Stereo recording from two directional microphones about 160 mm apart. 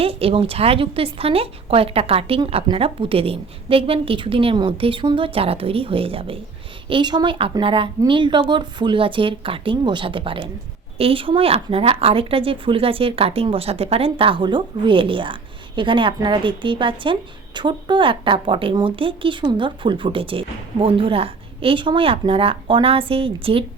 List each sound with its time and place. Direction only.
0.0 s speech: 35° right (ahead or behind)